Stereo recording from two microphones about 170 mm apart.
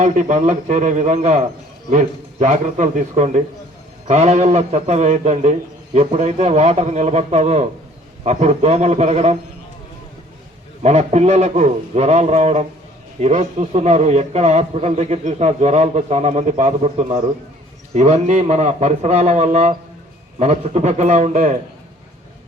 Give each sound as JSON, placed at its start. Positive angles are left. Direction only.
{"t": 0.0, "sound": "a man's voice", "side_deg": -45}
{"t": 10.8, "sound": "a man's voice", "side_deg": -40}